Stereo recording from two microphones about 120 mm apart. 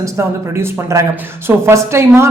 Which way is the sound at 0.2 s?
20° right (ahead or behind).